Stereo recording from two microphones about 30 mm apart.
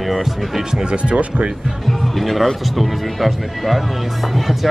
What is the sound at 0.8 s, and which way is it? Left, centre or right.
Speech, right.